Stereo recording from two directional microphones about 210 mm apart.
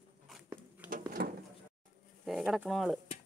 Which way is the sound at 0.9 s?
40° right (ahead or behind).